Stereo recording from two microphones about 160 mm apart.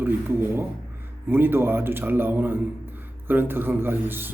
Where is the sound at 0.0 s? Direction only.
15° right (ahead or behind).